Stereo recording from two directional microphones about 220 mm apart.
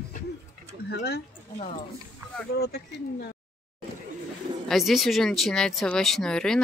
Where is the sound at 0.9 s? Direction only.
45° left (ahead or behind).